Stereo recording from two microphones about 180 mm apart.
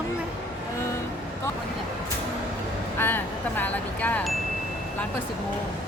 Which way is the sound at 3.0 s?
10° left (ahead or behind).